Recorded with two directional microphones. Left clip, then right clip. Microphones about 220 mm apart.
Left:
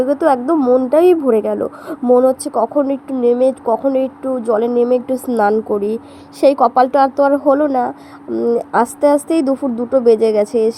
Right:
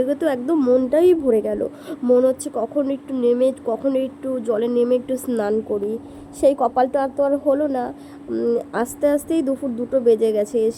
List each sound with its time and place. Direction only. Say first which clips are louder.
0.0 s speech: left 7 dB; 5° left (ahead or behind)
0.9 s a woman's voice: left 5 dB; 10° left (ahead or behind)
5.6 s a woman's voice: left 6 dB; 30° left (ahead or behind)
8.3 s a woman's voice: left 5 dB; 5° left (ahead or behind)